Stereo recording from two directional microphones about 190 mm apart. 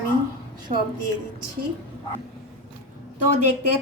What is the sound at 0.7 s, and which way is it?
Speech, 40° right (ahead or behind).